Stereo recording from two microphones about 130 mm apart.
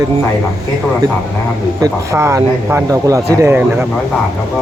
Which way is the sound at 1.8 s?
20° right (ahead or behind).